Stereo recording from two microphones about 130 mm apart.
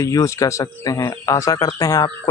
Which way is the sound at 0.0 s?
25° left (ahead or behind).